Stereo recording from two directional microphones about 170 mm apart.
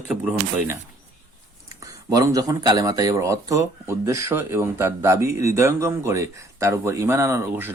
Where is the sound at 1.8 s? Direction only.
20° right (ahead or behind).